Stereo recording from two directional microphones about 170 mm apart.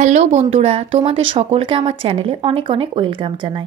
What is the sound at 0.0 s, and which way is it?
A woman's voice, 45° right (ahead or behind).